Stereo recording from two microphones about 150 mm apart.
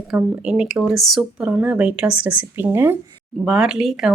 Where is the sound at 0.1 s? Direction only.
5° right (ahead or behind).